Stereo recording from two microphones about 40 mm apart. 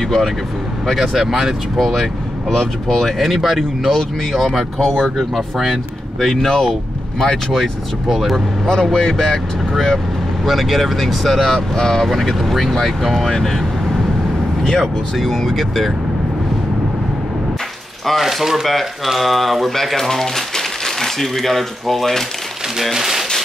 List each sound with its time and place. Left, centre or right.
0.0 s speech: centre
0.9 s speech: centre
2.9 s speech: centre
3.3 s speech: centre
8.1 s speech: centre
8.6 s speech: centre
10.4 s speech: centre
14.6 s speech: centre
15.1 s speech: centre
18.2 s speech: centre
22.8 s speech: centre